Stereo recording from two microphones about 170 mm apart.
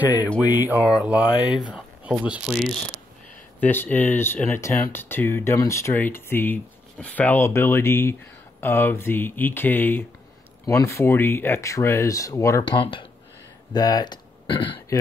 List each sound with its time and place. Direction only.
0.5 s speech: 10° right (ahead or behind)
3.6 s speech: 10° left (ahead or behind); by 14.8 s 30° left (ahead or behind)